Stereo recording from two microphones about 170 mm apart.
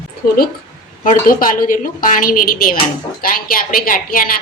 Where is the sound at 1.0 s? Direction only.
50° left (ahead or behind).